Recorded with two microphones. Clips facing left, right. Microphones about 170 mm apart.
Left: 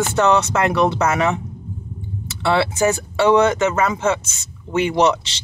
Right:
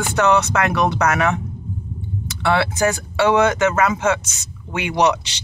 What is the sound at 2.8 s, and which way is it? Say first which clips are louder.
Speech: left 1 dB; centre (ahead or behind).